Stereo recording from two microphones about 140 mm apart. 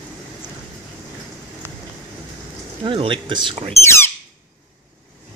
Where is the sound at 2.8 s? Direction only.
35° right (ahead or behind).